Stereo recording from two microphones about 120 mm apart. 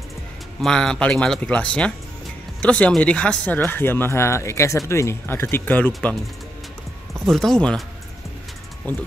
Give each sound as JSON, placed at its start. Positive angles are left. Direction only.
{"t": 0.6, "sound": "speech", "side_deg": 5}
{"t": 7.2, "sound": "speech", "side_deg": 0}
{"t": 8.8, "sound": "speech", "side_deg": 15}